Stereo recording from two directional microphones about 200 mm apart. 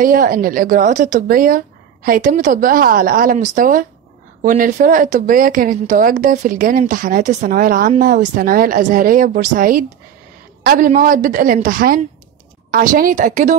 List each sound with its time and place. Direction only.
0.0 s a woman's voice: 45° right (ahead or behind)